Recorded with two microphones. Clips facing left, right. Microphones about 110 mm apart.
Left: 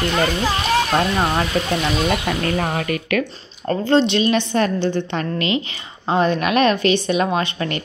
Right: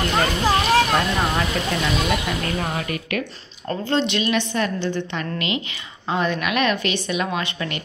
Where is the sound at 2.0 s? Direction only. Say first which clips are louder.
Left 3 dB; 55° left (ahead or behind); by 3.2 s 80° left.